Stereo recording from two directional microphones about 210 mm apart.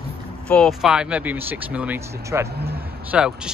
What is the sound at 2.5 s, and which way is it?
Speech, 50° right (ahead or behind).